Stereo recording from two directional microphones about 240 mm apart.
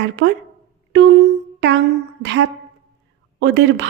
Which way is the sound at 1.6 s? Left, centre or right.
Right.